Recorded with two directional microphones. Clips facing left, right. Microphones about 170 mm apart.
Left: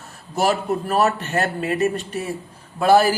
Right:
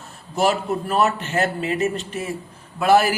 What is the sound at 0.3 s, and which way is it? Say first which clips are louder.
Speech: even; 40° left (ahead or behind).